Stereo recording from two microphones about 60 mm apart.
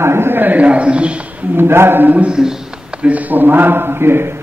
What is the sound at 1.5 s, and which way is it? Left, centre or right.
Speech, right.